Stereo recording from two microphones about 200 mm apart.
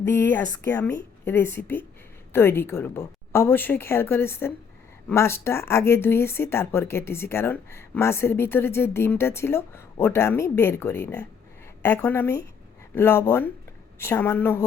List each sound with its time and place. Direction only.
0.0 s speech: 10° left (ahead or behind)